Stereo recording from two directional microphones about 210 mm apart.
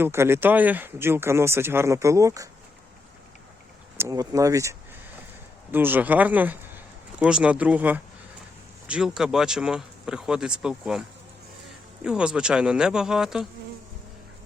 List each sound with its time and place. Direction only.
0.0 s speech: 10° right (ahead or behind)
3.9 s speech: 15° right (ahead or behind)
12.0 s speech: 5° right (ahead or behind)